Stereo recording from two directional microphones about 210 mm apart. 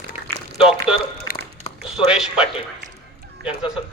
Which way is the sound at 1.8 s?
5° right (ahead or behind).